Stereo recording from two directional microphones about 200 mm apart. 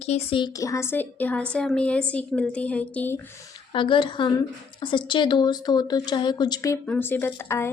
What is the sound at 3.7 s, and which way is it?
Speech, 25° left (ahead or behind).